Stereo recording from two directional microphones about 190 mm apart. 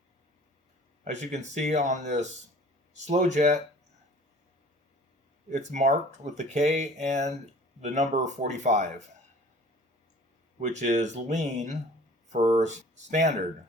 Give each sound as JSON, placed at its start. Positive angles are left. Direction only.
{"t": 1.0, "sound": "speech", "side_deg": -40}
{"t": 5.5, "sound": "speech", "side_deg": -40}
{"t": 10.6, "sound": "speech", "side_deg": -40}